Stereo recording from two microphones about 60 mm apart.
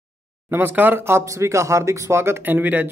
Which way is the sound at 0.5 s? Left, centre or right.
Right.